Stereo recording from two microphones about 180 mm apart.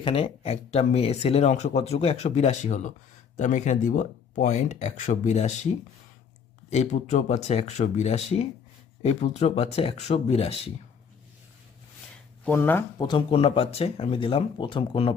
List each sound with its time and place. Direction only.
0.0 s speech: 30° left (ahead or behind)
6.7 s speech: 40° left (ahead or behind)
12.5 s speech: 10° left (ahead or behind)
13.0 s speech: 25° left (ahead or behind)